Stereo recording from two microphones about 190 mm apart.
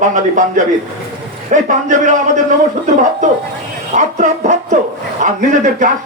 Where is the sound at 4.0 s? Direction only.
40° right (ahead or behind).